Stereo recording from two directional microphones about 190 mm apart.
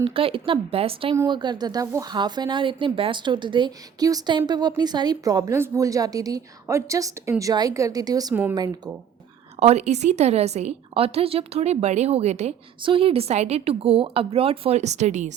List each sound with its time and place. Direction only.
0.0 s a woman's voice: 30° right (ahead or behind)
1.1 s a woman's voice: 20° right (ahead or behind)
9.6 s a woman's voice: 35° right (ahead or behind)